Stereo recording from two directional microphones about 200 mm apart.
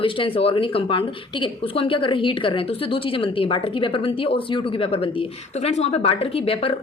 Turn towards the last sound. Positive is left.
turn(degrees=30)  # may be behind; listen again after turning